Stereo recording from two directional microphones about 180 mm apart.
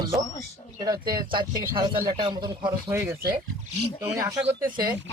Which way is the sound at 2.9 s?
15° right (ahead or behind).